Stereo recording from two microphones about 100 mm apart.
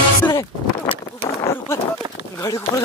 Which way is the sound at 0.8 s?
65° left (ahead or behind).